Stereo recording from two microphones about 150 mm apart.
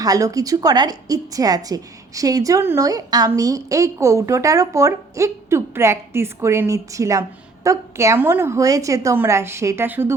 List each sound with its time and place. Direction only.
0.0 s a woman's voice: 25° right (ahead or behind)